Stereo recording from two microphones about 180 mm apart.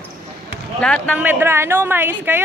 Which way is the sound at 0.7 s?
5° left (ahead or behind).